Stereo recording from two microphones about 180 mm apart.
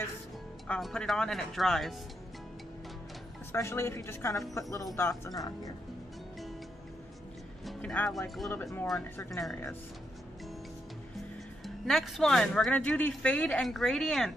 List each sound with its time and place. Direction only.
0.7 s speech: 5° left (ahead or behind)
3.5 s a woman's voice: 15° left (ahead or behind)
7.6 s speech: 5° left (ahead or behind)
11.6 s speech: centre (ahead or behind)